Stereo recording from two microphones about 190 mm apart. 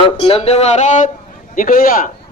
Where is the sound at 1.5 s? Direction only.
45° left (ahead or behind).